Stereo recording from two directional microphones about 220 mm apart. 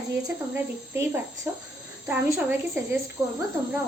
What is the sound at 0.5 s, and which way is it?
A woman's voice, 10° right (ahead or behind).